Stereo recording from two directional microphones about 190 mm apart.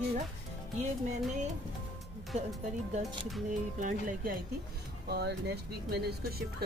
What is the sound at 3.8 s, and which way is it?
Speech, 45° right (ahead or behind).